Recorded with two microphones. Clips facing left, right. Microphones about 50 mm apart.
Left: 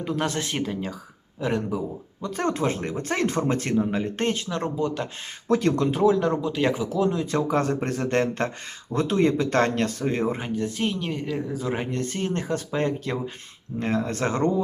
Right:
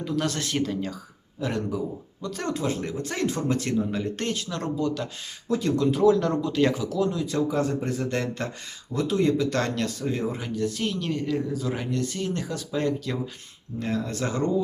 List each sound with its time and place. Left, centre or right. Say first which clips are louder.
0.0 s speech: left 1 dB; left
2.2 s speech: left 3 dB; left
5.5 s speech: left 2 dB; left
6.0 s speech: right 1 dB; left
11.6 s speech: left 1 dB; left